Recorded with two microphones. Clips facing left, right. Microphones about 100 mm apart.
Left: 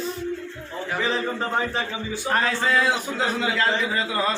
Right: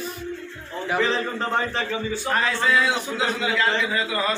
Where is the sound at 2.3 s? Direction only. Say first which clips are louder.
Even; 45° left (ahead or behind).